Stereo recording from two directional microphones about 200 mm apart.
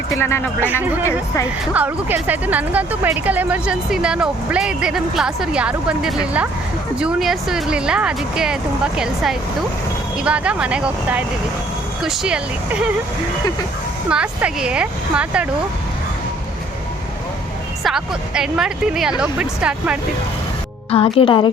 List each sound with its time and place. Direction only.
0.2 s speech: 10° left (ahead or behind)
0.8 s speech: 10° right (ahead or behind)
14.1 s speech: 5° right (ahead or behind)
17.8 s speech: 5° right (ahead or behind)
20.9 s speech: 25° left (ahead or behind)